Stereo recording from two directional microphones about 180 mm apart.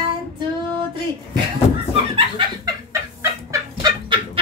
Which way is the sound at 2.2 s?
25° right (ahead or behind).